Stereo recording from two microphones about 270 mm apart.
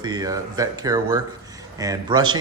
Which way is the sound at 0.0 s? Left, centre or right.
Centre.